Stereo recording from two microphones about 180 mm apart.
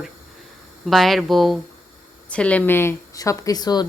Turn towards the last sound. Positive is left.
turn(degrees=20)  # may be behind; listen again after turning